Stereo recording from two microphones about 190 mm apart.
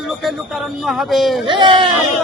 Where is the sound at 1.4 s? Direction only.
25° right (ahead or behind).